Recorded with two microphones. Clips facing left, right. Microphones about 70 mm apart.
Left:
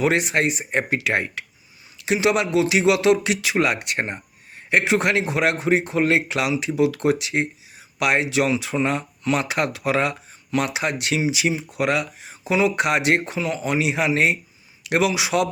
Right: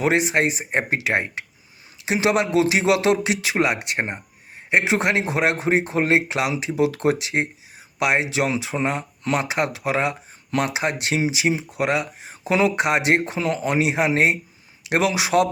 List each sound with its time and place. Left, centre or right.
0.0 s a man's voice: right
2.1 s a man's voice: right
12.3 s speech: right
12.7 s a man's voice: right
13.4 s speech: right